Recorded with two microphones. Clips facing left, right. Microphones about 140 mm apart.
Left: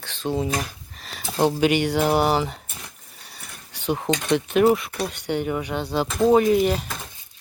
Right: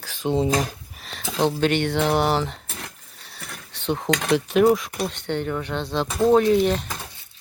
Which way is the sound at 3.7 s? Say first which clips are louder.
Left 1 dB; 5° left (ahead or behind).